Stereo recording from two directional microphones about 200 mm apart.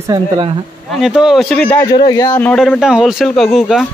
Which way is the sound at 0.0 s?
20° right (ahead or behind).